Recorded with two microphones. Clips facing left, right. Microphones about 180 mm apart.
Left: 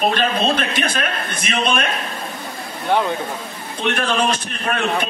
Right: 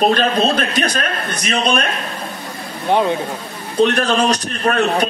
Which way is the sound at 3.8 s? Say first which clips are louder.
Right 5 dB; 40° right (ahead or behind).